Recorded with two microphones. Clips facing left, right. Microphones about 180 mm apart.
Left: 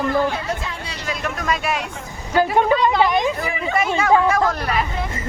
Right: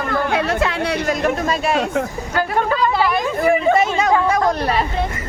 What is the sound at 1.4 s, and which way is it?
Speech, 30° right (ahead or behind).